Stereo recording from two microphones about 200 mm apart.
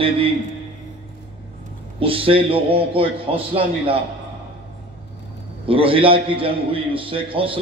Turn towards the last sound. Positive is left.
turn(degrees=-25)  # may be behind; listen again after turning